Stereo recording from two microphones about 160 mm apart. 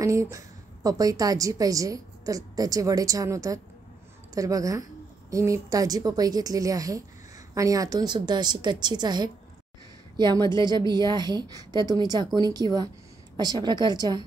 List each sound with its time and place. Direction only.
0.0 s a woman's voice: 20° right (ahead or behind)